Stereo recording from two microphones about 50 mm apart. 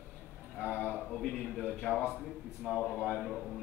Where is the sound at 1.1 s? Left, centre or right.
Centre.